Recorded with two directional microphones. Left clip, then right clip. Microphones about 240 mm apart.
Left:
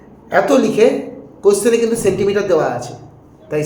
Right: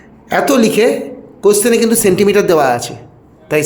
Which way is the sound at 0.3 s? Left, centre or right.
Right.